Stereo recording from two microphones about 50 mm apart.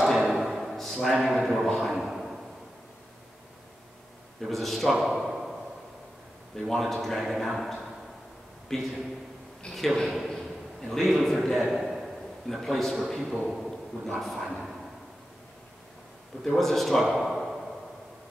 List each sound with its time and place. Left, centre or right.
0.0 s drawer open or close: centre
1.2 s a sound: centre
4.4 s a man's voice: centre
6.6 s speech: centre
9.7 s a man's voice: centre
10.0 s a sound: centre
10.8 s a man's voice: centre
13.6 s a sound: centre
14.2 s speech: centre
16.4 s a man's voice: centre